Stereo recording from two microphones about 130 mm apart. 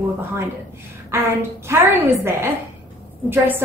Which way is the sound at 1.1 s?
20° right (ahead or behind).